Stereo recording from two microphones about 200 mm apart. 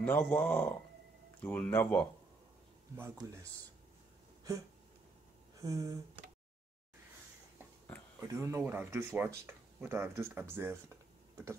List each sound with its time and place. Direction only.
0.0 s speech: 10° left (ahead or behind)
5.6 s speech: 15° right (ahead or behind)
8.2 s speech: 15° right (ahead or behind)